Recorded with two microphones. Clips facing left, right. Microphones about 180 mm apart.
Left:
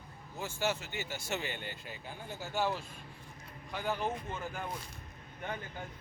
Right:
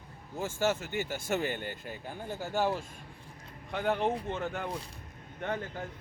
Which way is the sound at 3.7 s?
65° right (ahead or behind).